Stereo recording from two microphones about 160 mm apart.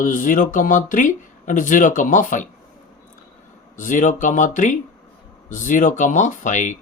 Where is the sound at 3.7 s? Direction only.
55° left (ahead or behind).